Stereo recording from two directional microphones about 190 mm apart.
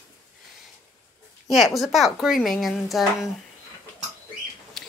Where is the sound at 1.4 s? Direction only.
Centre (ahead or behind).